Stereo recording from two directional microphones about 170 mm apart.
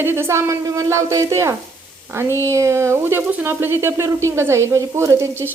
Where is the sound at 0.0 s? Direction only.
15° right (ahead or behind).